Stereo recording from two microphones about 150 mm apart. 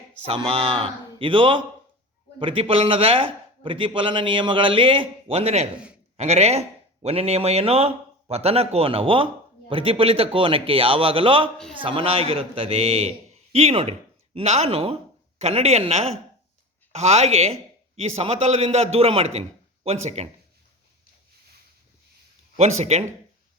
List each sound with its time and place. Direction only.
0.3 s speech: 35° right (ahead or behind)
5.7 s a man's voice: 5° right (ahead or behind)
6.1 s a man's voice: 45° right (ahead or behind)
22.5 s a man's voice: 45° right (ahead or behind)